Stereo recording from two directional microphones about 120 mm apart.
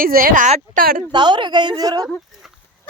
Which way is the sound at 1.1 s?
40° right (ahead or behind).